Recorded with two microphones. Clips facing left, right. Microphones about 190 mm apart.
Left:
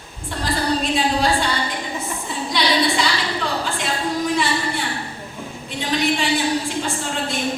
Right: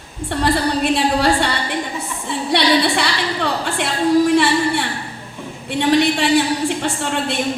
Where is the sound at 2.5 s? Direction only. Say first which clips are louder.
Right 4 dB; 65° right (ahead or behind).